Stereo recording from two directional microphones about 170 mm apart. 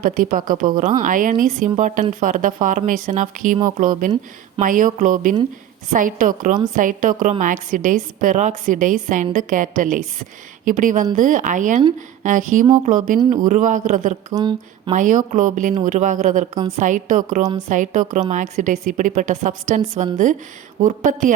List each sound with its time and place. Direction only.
0.0 s a woman's voice: 55° right (ahead or behind)
14.3 s speech: 25° right (ahead or behind)
14.9 s a woman's voice: 50° right (ahead or behind)